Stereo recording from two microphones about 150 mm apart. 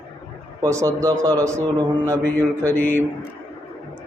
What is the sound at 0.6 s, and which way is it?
Speech, 20° right (ahead or behind).